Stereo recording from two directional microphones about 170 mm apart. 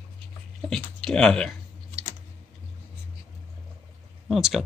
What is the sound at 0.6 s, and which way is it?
Speech, 5° left (ahead or behind).